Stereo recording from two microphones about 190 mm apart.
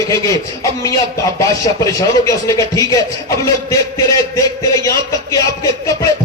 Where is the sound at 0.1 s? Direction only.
15° left (ahead or behind).